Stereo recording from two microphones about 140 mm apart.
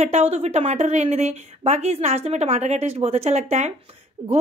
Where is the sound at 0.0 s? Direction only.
50° right (ahead or behind).